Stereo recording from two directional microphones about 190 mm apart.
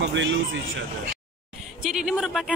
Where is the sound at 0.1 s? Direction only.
75° right (ahead or behind).